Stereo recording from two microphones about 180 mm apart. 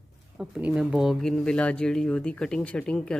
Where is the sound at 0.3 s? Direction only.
5° right (ahead or behind).